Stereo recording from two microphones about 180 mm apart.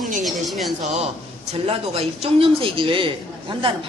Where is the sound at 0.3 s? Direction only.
Centre (ahead or behind).